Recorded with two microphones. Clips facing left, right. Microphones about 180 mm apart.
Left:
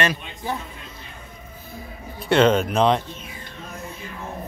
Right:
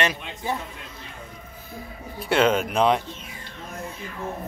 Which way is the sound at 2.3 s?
10° right (ahead or behind).